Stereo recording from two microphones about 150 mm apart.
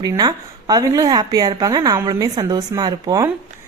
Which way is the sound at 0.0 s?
25° right (ahead or behind).